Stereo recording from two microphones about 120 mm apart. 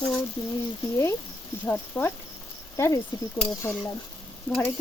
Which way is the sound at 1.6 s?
15° left (ahead or behind).